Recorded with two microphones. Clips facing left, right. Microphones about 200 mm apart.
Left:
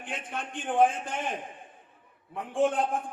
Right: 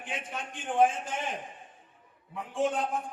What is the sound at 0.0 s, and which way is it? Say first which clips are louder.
Speech: left 1 dB; 55° left (ahead or behind).